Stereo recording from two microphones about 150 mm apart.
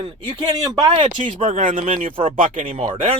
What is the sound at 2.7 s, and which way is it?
Speech, 35° right (ahead or behind).